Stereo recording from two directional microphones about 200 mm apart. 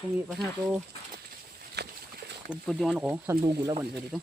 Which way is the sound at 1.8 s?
55° right (ahead or behind).